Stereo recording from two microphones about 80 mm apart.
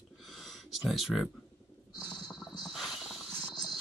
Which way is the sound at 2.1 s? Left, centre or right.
Left.